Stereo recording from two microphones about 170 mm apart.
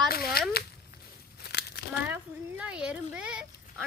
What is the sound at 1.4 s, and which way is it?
Crumpling, 75° left (ahead or behind).